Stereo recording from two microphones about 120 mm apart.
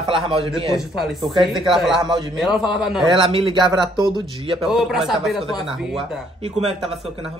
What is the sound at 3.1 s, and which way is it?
Speech, 50° right (ahead or behind).